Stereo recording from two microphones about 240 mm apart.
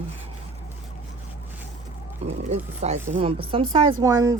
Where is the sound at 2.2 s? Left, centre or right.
Right.